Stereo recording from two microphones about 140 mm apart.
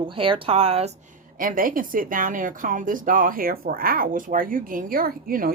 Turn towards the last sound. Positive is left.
turn(degrees=-90)